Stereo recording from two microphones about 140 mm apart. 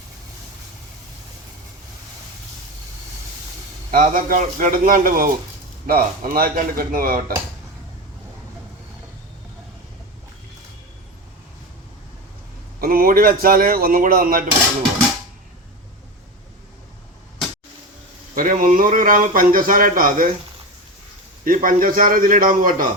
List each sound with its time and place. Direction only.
3.9 s speech: 75° right (ahead or behind)
12.8 s speech: 90° right
18.3 s a man's voice: 75° right (ahead or behind)
21.4 s a man's voice: 80° right